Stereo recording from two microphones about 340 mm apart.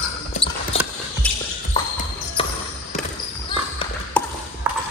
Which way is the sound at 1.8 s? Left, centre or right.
Centre.